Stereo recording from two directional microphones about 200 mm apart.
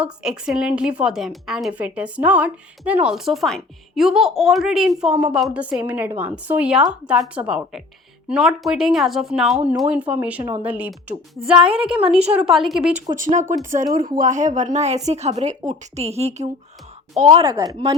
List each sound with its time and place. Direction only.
0.0 s a woman's voice: 5° right (ahead or behind)
13.1 s a woman's voice: 40° right (ahead or behind); by 17.9 s 25° right (ahead or behind)